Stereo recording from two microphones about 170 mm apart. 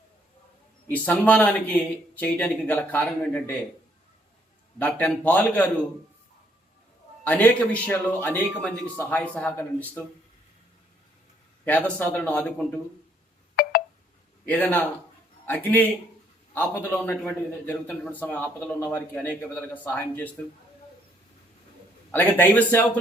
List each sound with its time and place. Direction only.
0.9 s speech: 10° left (ahead or behind)
4.8 s speech: 10° left (ahead or behind)
7.3 s speech: 10° left (ahead or behind)
11.6 s speech: 10° left (ahead or behind)
13.6 s telephone dialing: 65° left (ahead or behind)
14.4 s speech: 10° left (ahead or behind)
22.1 s speech: 10° left (ahead or behind)